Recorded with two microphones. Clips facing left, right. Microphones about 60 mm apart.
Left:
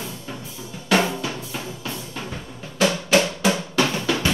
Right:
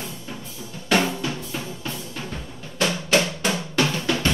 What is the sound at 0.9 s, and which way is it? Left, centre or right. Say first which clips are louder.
Drum: left 1 dB; centre.